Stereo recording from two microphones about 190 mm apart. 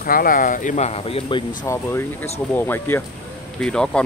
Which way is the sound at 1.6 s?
15° left (ahead or behind).